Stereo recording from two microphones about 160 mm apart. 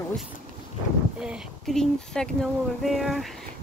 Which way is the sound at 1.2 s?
5° right (ahead or behind).